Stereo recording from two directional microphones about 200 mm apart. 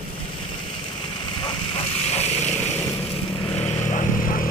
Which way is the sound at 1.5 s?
30° left (ahead or behind).